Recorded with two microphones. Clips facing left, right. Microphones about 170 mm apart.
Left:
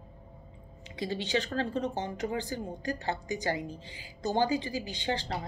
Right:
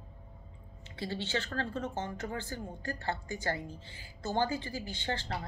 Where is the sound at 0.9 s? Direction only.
15° left (ahead or behind).